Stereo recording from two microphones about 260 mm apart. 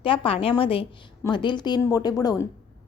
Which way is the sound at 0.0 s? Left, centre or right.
Centre.